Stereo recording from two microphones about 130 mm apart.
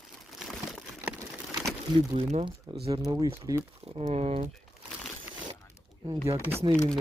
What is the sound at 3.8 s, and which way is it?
Speech, 50° right (ahead or behind).